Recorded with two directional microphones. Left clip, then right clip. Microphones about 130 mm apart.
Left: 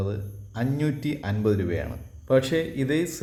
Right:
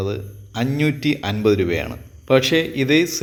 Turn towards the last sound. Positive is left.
turn(degrees=-15)  # may be behind; listen again after turning